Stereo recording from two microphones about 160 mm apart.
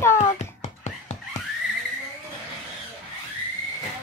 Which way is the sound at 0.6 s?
45° left (ahead or behind).